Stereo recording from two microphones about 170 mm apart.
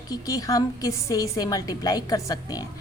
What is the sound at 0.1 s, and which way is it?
A woman's voice, 20° left (ahead or behind).